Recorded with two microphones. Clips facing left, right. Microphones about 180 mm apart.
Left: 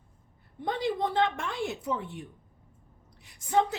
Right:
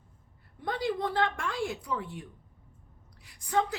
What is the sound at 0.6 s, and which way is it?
A woman's voice, 20° left (ahead or behind).